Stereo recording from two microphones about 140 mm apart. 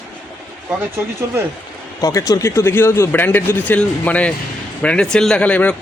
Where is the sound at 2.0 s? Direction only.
25° left (ahead or behind).